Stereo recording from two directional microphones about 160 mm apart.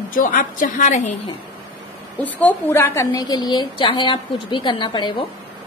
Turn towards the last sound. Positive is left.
turn(degrees=30)  # may be behind; listen again after turning